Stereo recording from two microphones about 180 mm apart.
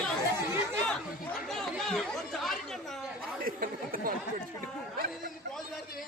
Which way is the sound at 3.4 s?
55° right (ahead or behind).